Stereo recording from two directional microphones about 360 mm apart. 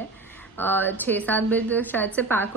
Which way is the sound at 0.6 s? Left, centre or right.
Centre.